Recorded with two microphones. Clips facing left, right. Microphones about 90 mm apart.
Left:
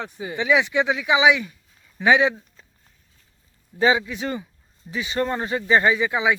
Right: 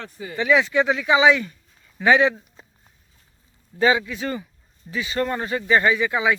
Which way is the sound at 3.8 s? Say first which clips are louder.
Even; 20° left (ahead or behind).